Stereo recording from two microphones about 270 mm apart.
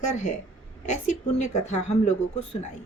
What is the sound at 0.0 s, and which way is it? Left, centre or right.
Speech, left.